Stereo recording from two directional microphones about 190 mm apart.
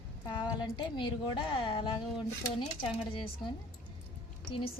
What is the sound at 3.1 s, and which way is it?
Speech, 25° left (ahead or behind).